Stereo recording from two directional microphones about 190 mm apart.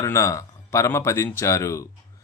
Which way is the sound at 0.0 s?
15° left (ahead or behind).